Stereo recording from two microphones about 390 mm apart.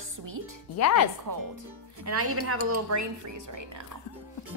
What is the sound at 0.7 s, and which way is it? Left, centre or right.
Speech, left.